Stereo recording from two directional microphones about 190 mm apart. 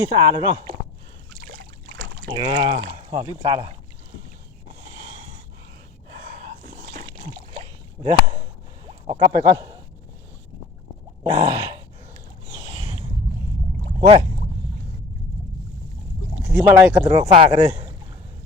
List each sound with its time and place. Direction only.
0.1 s speech: 25° right (ahead or behind)
1.5 s boat: 50° right (ahead or behind)
2.5 s speech: 25° right (ahead or behind)
6.3 s a sound: 40° right (ahead or behind)
7.3 s rowboat: 30° right (ahead or behind)
8.9 s a sound: 30° right (ahead or behind)
9.4 s speech: 20° right (ahead or behind)
11.2 s groan: 25° right (ahead or behind)
12.5 s a sound: 20° right (ahead or behind)
14.0 s speech: 35° right (ahead or behind)
16.4 s a sound: 10° right (ahead or behind)
16.8 s speech: 10° right (ahead or behind)
17.1 s a man's voice: 30° right (ahead or behind)